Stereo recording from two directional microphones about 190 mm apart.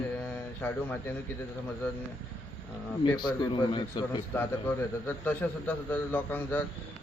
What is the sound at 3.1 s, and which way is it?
A man's voice, 25° left (ahead or behind).